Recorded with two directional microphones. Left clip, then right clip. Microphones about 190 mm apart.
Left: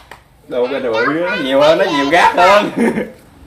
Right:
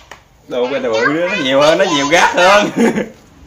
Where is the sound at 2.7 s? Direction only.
40° right (ahead or behind).